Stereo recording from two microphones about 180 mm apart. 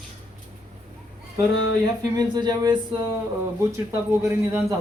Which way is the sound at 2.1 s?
20° right (ahead or behind).